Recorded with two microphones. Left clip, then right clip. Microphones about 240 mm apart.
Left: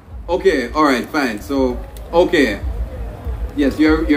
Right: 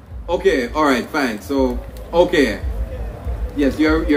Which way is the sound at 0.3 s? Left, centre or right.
Centre.